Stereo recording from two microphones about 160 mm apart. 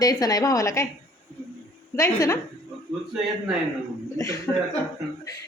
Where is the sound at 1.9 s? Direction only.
20° left (ahead or behind).